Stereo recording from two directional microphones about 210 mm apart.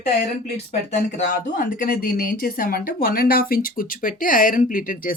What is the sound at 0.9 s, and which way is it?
Speech, 35° left (ahead or behind).